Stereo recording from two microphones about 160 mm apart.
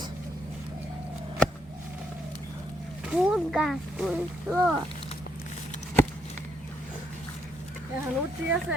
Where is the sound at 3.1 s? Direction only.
5° right (ahead or behind).